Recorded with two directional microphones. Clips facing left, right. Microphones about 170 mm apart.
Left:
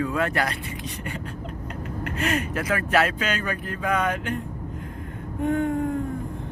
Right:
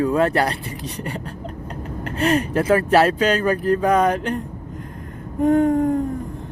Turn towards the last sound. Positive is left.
turn(degrees=-40)  # may be behind; listen again after turning